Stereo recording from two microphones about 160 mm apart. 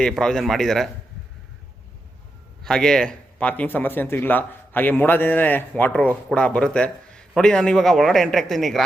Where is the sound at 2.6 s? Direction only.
5° left (ahead or behind).